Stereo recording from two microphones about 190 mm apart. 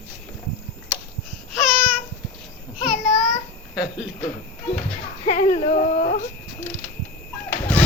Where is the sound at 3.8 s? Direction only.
5° right (ahead or behind).